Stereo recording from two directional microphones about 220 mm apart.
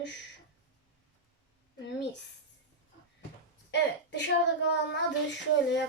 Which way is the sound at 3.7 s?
50° left (ahead or behind).